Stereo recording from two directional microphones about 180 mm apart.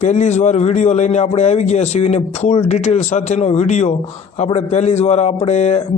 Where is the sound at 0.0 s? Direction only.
40° left (ahead or behind).